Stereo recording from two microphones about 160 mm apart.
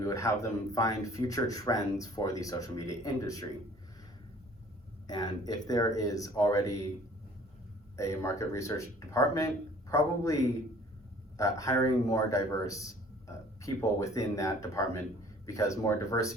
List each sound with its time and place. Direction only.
0.0 s speech: 20° left (ahead or behind)
5.0 s speech: 25° left (ahead or behind)
7.9 s a man's voice: 20° left (ahead or behind)